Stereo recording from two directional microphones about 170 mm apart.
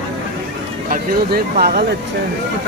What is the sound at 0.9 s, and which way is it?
Speech, 55° right (ahead or behind).